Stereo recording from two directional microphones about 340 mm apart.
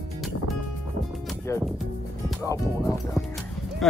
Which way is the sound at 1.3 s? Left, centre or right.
Centre.